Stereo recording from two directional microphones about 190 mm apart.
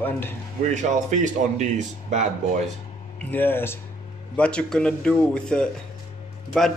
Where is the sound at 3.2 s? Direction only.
10° left (ahead or behind).